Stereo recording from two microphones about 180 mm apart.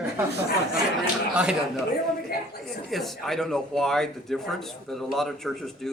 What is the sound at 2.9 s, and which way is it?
Speech, centre (ahead or behind).